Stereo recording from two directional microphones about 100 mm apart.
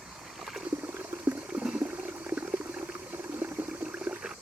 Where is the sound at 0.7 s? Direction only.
20° right (ahead or behind).